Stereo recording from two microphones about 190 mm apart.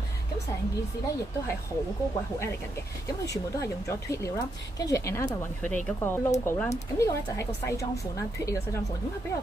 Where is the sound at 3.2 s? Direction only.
15° left (ahead or behind).